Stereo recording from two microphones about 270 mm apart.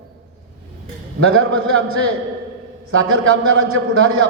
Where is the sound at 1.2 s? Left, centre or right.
Right.